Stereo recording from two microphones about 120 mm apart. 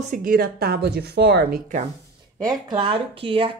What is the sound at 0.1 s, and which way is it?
Speech, 90° right.